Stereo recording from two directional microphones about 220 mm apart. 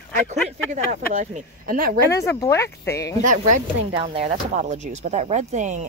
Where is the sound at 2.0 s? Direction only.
15° left (ahead or behind).